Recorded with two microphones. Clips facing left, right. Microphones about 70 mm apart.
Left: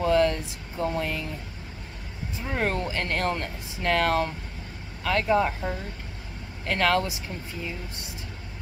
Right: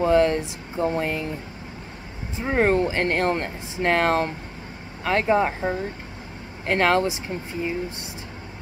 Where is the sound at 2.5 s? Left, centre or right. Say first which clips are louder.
Right 8 dB; right.